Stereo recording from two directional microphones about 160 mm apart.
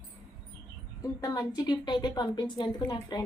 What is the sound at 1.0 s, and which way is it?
A woman's voice, 20° left (ahead or behind).